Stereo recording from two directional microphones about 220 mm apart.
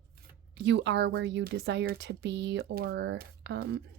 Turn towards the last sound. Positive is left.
turn(degrees=-50)  # may be behind; listen again after turning